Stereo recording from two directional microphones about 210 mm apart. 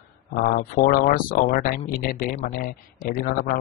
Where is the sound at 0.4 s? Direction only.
45° left (ahead or behind).